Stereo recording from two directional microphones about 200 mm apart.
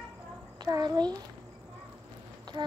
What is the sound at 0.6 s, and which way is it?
Speech, 20° right (ahead or behind).